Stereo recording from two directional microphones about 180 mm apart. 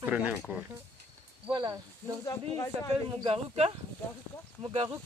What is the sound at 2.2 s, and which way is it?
Speech, 15° left (ahead or behind).